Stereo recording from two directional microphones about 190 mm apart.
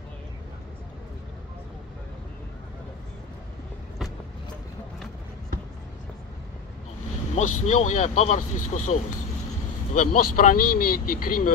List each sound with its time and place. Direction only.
7.3 s speech: 40° left (ahead or behind)